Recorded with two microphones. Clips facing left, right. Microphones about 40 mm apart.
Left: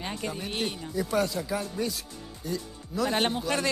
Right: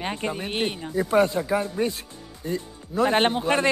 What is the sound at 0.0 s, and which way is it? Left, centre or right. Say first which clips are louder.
Speech: right 5 dB; right.